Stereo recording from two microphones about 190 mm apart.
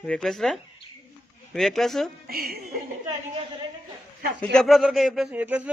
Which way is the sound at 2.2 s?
50° right (ahead or behind).